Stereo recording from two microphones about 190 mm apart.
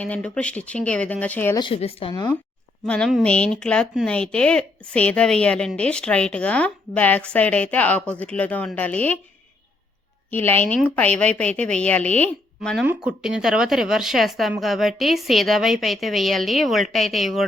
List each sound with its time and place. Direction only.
0.0 s speech: 5° left (ahead or behind)
1.5 s speech: 25° left (ahead or behind)
2.8 s speech: 5° left (ahead or behind)
10.2 s speech: 10° left (ahead or behind)
12.8 s speech: 5° right (ahead or behind)